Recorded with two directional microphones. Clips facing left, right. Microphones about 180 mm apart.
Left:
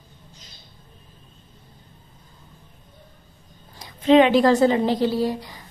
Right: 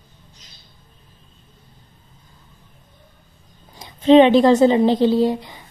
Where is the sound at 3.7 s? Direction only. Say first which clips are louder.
Right 4 dB; 25° right (ahead or behind).